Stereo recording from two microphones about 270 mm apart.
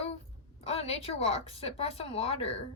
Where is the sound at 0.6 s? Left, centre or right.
Left.